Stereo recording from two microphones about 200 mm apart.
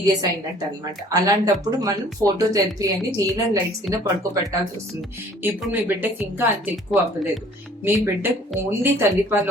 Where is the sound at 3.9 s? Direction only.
15° right (ahead or behind).